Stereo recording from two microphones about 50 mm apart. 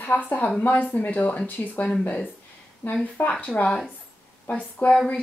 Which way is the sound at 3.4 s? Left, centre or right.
Left.